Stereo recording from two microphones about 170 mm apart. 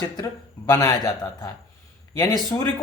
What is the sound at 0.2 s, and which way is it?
Speech, 20° left (ahead or behind).